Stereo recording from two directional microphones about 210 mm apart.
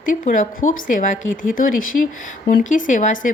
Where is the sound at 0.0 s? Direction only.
40° left (ahead or behind).